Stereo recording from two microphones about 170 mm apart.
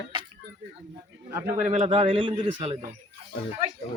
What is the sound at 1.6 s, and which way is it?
Speech, 45° right (ahead or behind).